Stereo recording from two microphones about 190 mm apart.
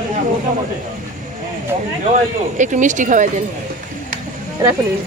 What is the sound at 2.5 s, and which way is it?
Speech, 40° right (ahead or behind).